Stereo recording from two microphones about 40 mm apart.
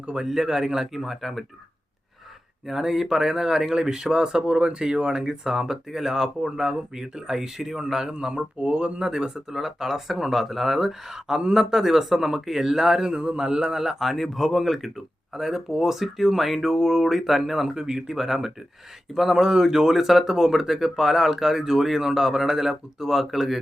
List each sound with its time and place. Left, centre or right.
0.0 s a man's voice: right
0.3 s speech: centre
1.1 s speech: centre
2.6 s speech: centre; by 9.0 s right
9.0 s a man's voice: centre
13.7 s speech: centre
17.7 s speech: centre